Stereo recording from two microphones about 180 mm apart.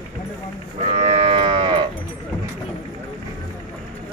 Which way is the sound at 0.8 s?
35° right (ahead or behind).